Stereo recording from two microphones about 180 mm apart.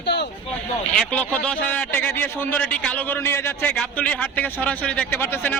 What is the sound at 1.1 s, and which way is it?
Speech, 5° left (ahead or behind).